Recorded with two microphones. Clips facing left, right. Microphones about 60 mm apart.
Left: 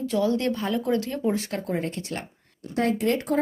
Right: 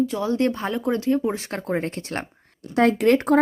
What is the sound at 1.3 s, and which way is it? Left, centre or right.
Speech, right.